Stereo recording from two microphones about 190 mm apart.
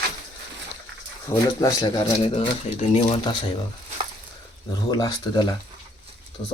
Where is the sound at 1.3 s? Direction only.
25° left (ahead or behind).